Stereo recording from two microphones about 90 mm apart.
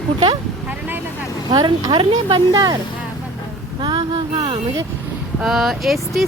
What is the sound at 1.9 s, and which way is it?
Speech, 60° right (ahead or behind).